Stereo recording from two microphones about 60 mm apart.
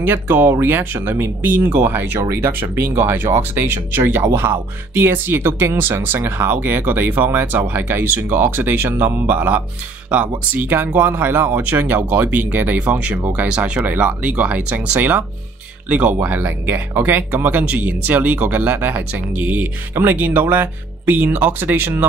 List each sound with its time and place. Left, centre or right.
0.0 s speech: right
9.3 s speech: right